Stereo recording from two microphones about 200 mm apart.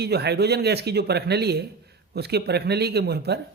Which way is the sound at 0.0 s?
55° right (ahead or behind).